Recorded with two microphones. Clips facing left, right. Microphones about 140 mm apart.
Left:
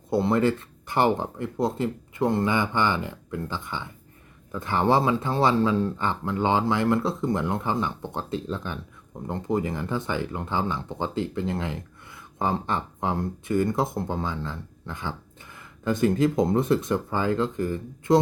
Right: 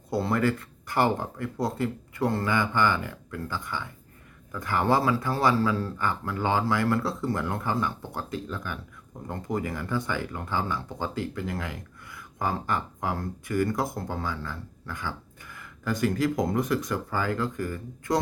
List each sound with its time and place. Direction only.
0.1 s speech: 20° left (ahead or behind)